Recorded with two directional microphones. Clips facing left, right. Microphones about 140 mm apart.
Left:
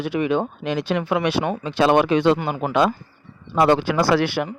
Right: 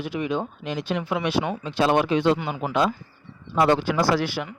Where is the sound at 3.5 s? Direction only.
80° left; by 4.5 s 65° left (ahead or behind).